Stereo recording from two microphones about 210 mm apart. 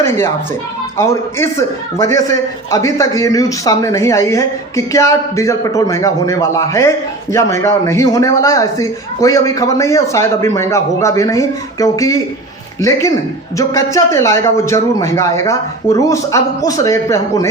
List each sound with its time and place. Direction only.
0.9 s a man's voice: 15° left (ahead or behind)